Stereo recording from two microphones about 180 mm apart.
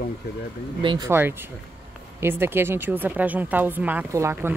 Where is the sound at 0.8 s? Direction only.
25° right (ahead or behind).